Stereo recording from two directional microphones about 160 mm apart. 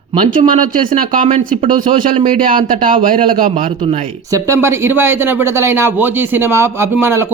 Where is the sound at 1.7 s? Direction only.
55° right (ahead or behind).